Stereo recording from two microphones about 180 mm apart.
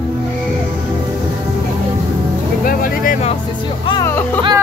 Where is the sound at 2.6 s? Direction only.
50° left (ahead or behind).